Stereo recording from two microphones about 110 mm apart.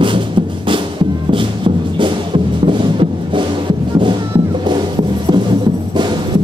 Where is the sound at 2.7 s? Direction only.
50° right (ahead or behind).